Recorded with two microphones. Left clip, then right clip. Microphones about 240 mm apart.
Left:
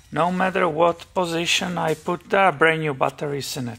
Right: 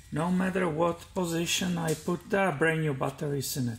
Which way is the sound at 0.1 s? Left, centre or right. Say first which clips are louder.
Left 10 dB; centre.